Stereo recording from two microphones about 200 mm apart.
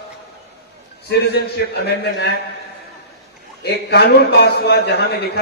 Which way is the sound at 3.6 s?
55° left (ahead or behind).